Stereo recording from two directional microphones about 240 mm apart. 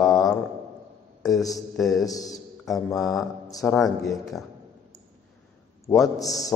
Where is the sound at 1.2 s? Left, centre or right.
Centre.